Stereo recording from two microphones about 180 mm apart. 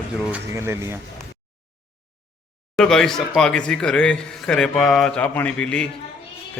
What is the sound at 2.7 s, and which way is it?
Speech, 5° left (ahead or behind).